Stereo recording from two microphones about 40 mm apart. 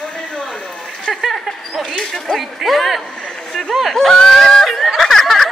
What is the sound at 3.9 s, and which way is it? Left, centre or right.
Speech, centre.